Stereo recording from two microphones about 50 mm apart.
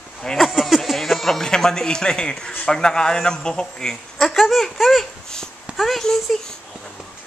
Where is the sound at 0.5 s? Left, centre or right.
Centre.